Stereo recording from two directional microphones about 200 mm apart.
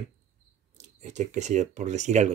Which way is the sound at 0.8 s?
35° right (ahead or behind).